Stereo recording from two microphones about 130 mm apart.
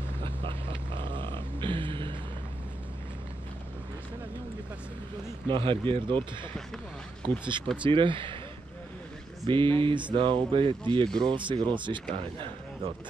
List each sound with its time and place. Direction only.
0.2 s a sound: 45° right (ahead or behind)
5.5 s speech: 40° right (ahead or behind)
7.2 s speech: 40° right (ahead or behind)
9.5 s speech: 40° right (ahead or behind)
11.1 s speech: 5° left (ahead or behind)
11.3 s speech: 40° right (ahead or behind)